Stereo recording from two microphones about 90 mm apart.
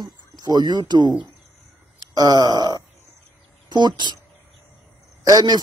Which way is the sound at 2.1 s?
45° right (ahead or behind).